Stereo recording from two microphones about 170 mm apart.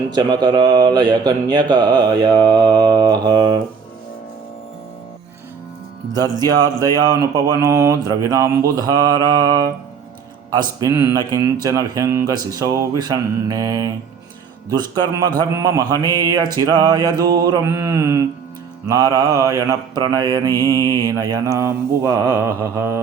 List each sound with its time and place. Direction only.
0.1 s mantra: 25° right (ahead or behind)
6.4 s mantra: 20° right (ahead or behind)